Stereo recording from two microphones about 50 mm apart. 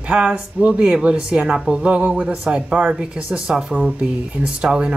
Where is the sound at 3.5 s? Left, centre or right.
Centre.